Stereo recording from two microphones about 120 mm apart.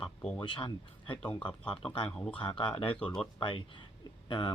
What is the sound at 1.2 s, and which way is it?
Speech, 10° left (ahead or behind).